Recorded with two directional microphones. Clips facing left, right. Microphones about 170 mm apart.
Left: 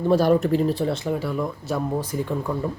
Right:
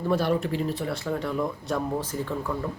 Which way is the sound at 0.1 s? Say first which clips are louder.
Left 7 dB; 40° left (ahead or behind).